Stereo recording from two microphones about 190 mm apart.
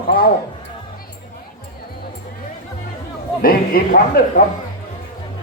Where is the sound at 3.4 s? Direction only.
50° left (ahead or behind).